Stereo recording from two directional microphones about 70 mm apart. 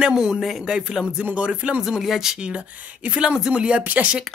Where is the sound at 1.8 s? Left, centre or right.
Centre.